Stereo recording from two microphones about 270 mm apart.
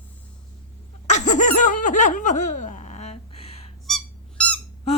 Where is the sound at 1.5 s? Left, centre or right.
Left.